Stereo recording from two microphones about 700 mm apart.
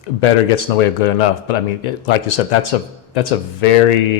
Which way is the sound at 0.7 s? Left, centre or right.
Left.